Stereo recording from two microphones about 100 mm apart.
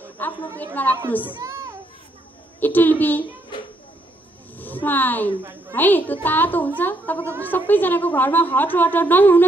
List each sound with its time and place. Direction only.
0.2 s a woman's voice: 20° left (ahead or behind)
1.4 s children playing: 35° right (ahead or behind)
2.6 s a woman's voice: 20° left (ahead or behind)
4.6 s a woman's voice: 20° left (ahead or behind)